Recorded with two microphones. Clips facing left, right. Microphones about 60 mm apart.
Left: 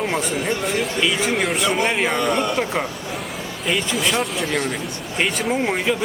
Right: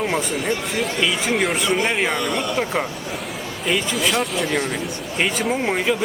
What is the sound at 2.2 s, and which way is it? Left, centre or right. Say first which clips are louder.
Speech: left 3 dB; left.